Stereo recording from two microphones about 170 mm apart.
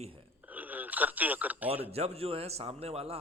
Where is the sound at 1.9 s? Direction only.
35° right (ahead or behind).